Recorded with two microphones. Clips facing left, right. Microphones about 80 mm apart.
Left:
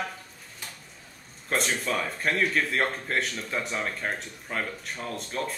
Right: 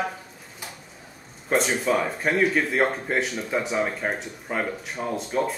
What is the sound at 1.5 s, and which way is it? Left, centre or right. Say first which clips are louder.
A man's voice: right 6 dB; centre.